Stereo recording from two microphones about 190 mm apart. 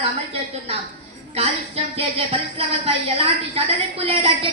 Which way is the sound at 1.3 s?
30° right (ahead or behind).